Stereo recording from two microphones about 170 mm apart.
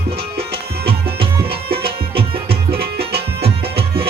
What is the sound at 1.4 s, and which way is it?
Music, 65° right (ahead or behind).